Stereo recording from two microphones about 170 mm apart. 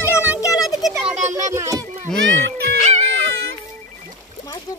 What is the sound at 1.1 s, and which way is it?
Speech, 45° right (ahead or behind).